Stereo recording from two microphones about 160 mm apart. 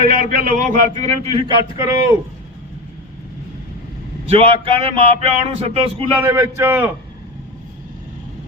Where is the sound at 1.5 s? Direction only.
40° left (ahead or behind).